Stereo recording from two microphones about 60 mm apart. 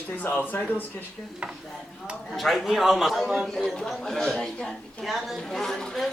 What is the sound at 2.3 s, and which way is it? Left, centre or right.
A man's voice, centre.